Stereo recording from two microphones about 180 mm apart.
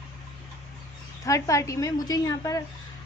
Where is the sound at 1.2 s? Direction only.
15° left (ahead or behind).